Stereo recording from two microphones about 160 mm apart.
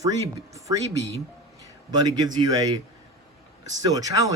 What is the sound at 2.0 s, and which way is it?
Speech, 25° right (ahead or behind).